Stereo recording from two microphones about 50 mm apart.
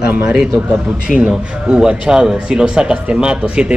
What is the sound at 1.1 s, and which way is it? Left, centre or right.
Speech, centre.